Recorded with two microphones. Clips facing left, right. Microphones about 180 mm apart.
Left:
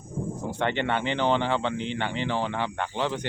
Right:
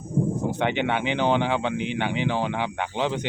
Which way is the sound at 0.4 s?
15° right (ahead or behind).